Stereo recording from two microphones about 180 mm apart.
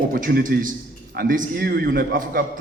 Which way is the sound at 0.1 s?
55° right (ahead or behind).